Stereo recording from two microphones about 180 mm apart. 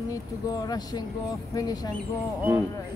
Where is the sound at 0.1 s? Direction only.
20° left (ahead or behind).